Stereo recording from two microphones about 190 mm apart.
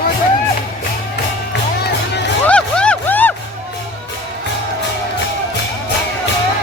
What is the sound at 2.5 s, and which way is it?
Music, 5° left (ahead or behind).